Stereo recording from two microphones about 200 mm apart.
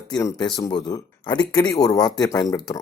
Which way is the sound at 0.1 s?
15° left (ahead or behind).